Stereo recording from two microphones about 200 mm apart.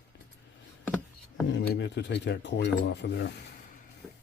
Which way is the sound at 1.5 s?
60° left (ahead or behind).